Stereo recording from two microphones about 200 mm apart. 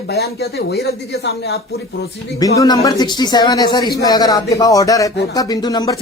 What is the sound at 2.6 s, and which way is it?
Speech, 15° left (ahead or behind).